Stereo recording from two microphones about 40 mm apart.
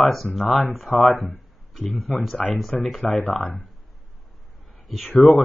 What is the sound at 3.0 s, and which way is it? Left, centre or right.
Speech, left.